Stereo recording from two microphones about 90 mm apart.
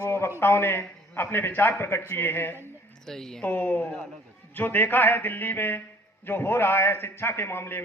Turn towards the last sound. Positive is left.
turn(degrees=25)  # may be behind; listen again after turning